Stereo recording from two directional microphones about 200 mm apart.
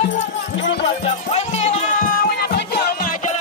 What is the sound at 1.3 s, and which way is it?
Music, 35° left (ahead or behind).